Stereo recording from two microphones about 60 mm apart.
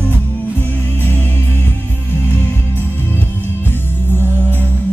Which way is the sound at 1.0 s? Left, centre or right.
Left.